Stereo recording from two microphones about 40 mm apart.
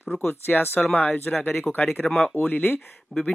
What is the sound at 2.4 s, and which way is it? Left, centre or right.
Speech, left.